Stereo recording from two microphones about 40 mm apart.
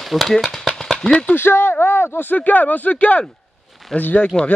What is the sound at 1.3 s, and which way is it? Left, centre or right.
Speech, left.